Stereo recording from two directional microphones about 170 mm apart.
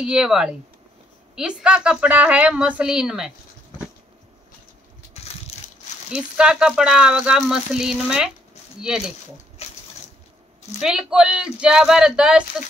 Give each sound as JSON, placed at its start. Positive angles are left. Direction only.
{"t": 0.0, "sound": "speech", "side_deg": -5}
{"t": 6.1, "sound": "speech", "side_deg": -5}
{"t": 9.6, "sound": "a sound", "side_deg": 40}
{"t": 10.8, "sound": "speech", "side_deg": -5}